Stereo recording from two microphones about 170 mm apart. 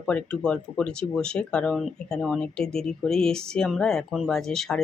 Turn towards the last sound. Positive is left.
turn(degrees=5)  # may be behind; listen again after turning